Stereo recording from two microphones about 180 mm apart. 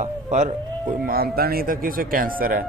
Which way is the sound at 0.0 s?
40° right (ahead or behind).